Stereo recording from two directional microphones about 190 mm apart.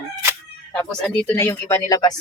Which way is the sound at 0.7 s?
5° left (ahead or behind).